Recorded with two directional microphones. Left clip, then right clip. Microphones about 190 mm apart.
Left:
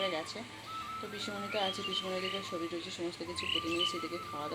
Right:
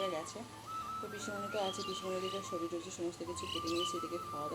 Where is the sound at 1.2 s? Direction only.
5° left (ahead or behind).